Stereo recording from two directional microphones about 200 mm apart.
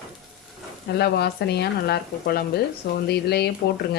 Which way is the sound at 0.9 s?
55° left (ahead or behind).